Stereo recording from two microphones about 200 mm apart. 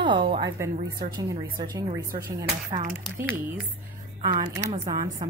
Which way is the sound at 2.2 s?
40° right (ahead or behind).